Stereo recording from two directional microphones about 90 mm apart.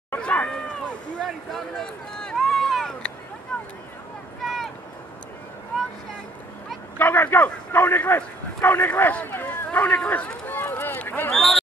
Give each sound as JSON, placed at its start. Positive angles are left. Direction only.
{"t": 0.2, "sound": "cat", "side_deg": 15}
{"t": 1.2, "sound": "a sound", "side_deg": 5}
{"t": 4.4, "sound": "vehicle", "side_deg": 0}
{"t": 7.0, "sound": "a man's voice", "side_deg": 20}
{"t": 11.3, "sound": "speech", "side_deg": 0}